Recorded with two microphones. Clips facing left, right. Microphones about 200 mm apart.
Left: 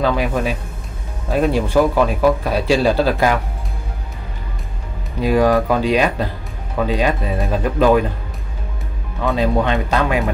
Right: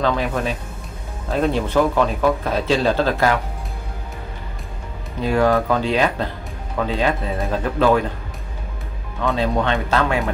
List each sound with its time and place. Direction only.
0.0 s speech: 10° left (ahead or behind)
5.2 s speech: 15° left (ahead or behind)
9.2 s speech: 15° left (ahead or behind)